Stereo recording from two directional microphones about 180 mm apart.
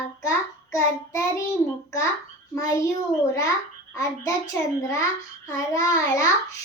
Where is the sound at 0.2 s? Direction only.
15° left (ahead or behind).